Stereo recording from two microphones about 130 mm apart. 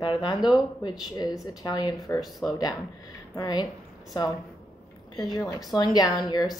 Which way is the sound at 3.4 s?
30° left (ahead or behind).